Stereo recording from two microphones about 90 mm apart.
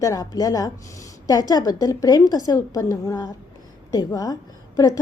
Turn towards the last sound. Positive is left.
turn(degrees=45)  # may be behind; listen again after turning